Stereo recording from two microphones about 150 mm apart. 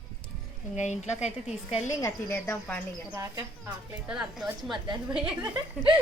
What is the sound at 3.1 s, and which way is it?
Speech, 20° right (ahead or behind).